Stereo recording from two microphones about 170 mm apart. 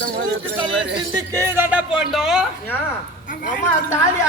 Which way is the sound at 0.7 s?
90° right.